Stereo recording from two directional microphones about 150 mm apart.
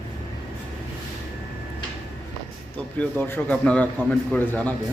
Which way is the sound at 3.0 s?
15° left (ahead or behind).